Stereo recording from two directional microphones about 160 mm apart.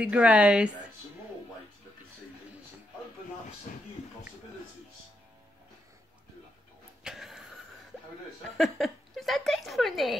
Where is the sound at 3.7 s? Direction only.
60° left (ahead or behind).